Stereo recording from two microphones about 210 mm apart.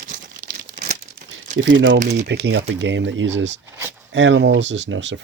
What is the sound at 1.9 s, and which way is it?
Speech, 35° right (ahead or behind).